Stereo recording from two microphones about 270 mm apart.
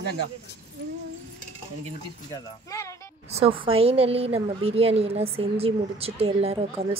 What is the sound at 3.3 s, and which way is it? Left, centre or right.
A woman's voice, right.